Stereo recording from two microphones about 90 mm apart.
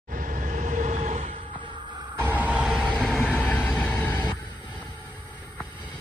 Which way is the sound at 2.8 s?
10° left (ahead or behind).